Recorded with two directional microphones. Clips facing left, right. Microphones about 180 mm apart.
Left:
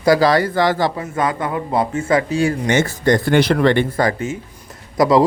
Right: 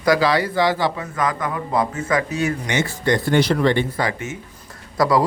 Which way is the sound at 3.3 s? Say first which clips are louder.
Left 2 dB; 60° left (ahead or behind).